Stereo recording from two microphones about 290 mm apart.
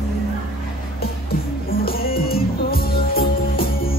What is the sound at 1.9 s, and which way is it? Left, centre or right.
Music, left.